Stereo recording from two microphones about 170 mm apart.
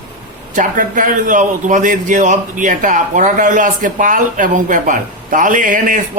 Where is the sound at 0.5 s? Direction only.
50° right (ahead or behind).